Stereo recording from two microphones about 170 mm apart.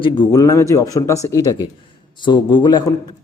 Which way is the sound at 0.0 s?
25° left (ahead or behind).